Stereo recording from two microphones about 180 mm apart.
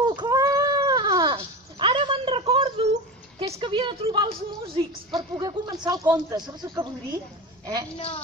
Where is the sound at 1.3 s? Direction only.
30° right (ahead or behind).